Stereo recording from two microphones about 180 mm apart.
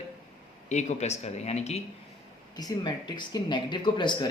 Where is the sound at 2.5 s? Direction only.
25° left (ahead or behind).